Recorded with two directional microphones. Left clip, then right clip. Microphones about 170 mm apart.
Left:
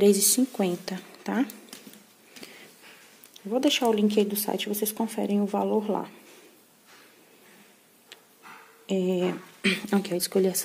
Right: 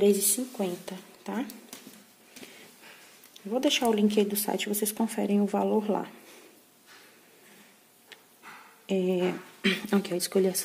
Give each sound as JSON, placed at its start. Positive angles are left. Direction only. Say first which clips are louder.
{"t": 0.0, "sound": "a woman's voice", "louder": "left 3 dB", "side_deg": 30}
{"t": 3.3, "sound": "speech", "louder": "left 2 dB", "side_deg": 20}
{"t": 8.8, "sound": "speech", "louder": "left 1 dB", "side_deg": 10}